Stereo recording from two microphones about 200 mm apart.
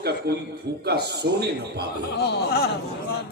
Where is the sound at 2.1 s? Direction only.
55° left (ahead or behind).